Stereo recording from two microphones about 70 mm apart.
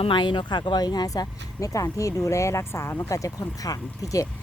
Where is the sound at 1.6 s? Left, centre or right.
Left.